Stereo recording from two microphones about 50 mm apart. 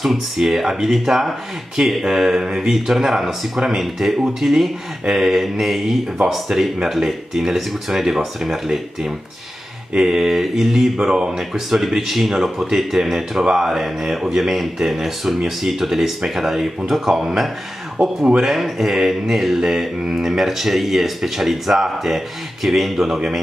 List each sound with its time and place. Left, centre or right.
0.0 s speech: centre
18.0 s speech: right
18.4 s speech: centre